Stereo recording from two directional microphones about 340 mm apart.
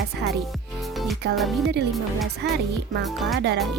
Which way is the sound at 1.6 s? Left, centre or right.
Right.